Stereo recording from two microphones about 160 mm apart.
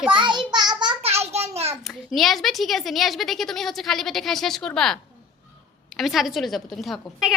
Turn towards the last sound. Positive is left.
turn(degrees=0)  # may be behind; listen again after turning